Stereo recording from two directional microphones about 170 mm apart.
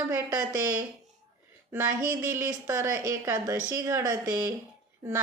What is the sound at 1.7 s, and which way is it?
A woman's voice, 15° right (ahead or behind).